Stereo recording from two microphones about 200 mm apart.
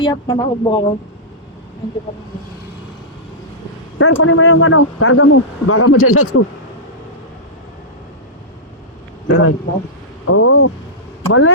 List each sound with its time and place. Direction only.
0.0 s speech: 20° left (ahead or behind)
3.9 s a man's voice: 90° left
9.2 s a man's voice: 90° left